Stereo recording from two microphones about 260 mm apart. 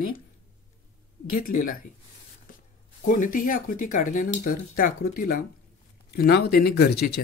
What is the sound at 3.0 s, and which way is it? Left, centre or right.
Speech, left.